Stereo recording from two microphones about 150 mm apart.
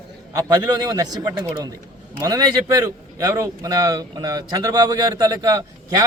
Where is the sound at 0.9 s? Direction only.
25° right (ahead or behind).